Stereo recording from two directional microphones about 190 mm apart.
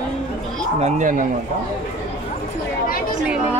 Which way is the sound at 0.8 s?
45° right (ahead or behind).